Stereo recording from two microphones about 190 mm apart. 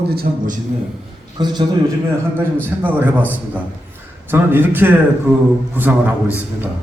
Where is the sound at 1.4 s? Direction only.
20° right (ahead or behind).